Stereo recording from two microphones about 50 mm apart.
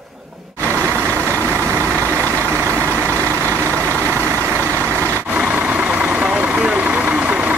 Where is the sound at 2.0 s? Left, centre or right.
Right.